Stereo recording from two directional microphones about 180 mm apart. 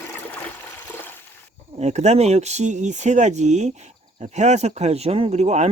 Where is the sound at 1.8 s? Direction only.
40° right (ahead or behind).